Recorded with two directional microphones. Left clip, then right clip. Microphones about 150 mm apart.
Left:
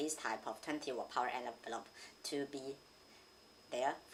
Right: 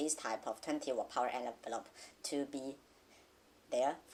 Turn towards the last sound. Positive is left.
turn(degrees=-45)  # may be behind; listen again after turning